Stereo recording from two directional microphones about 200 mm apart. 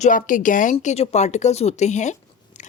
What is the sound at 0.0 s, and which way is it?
Speech, 40° left (ahead or behind).